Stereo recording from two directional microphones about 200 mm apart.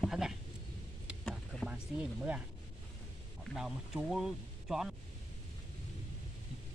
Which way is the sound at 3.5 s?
Centre (ahead or behind).